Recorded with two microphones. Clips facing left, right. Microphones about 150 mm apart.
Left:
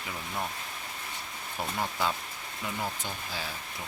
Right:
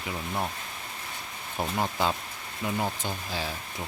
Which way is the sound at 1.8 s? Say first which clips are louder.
Right 3 dB; 25° right (ahead or behind).